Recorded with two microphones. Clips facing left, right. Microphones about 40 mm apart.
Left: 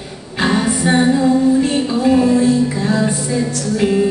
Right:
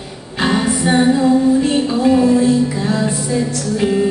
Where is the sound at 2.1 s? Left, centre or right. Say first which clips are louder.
Even; centre.